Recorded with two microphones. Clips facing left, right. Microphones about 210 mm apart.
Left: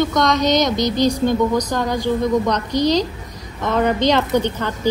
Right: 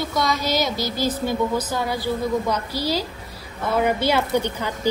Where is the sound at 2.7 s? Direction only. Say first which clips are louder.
Left 9 dB; 20° left (ahead or behind).